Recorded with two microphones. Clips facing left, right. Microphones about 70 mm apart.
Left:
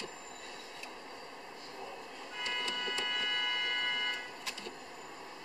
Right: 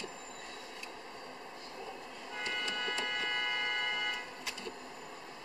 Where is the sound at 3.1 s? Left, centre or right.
Centre.